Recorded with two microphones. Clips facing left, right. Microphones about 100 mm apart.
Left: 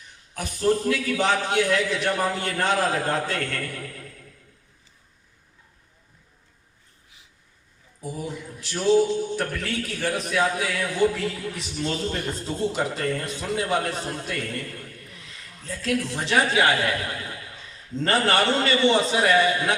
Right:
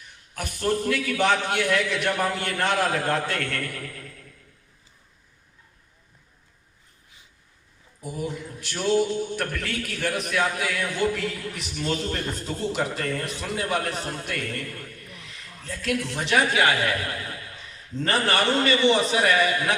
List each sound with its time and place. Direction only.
0.3 s a man's voice: 30° left (ahead or behind)
8.7 s a man's voice: 30° left (ahead or behind)
15.1 s a sound: 25° right (ahead or behind)
15.6 s a man's voice: 25° left (ahead or behind)